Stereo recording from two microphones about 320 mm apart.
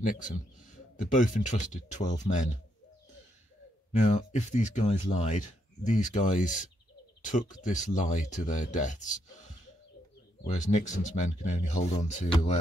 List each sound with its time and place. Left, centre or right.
0.0 s speech: left
3.9 s speech: left
7.2 s bird: left
7.5 s speech: left
10.5 s speech: left